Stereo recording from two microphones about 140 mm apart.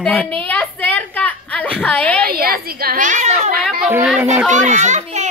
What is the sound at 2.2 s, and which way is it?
A woman's voice, 90° right.